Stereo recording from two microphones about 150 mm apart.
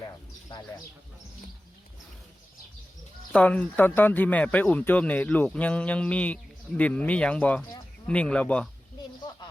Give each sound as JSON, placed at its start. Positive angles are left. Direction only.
{"t": 0.0, "sound": "bird", "side_deg": 25}
{"t": 3.3, "sound": "speech", "side_deg": 10}